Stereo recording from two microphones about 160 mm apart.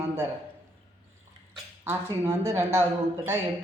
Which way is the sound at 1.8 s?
15° right (ahead or behind).